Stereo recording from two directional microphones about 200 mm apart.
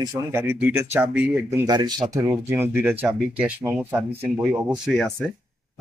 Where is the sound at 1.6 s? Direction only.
20° right (ahead or behind).